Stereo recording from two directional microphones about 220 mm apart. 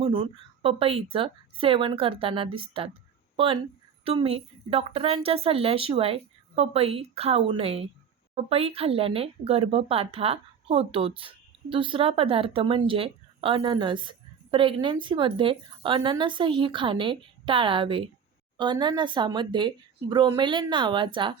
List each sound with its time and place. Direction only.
0.0 s speech: 25° right (ahead or behind)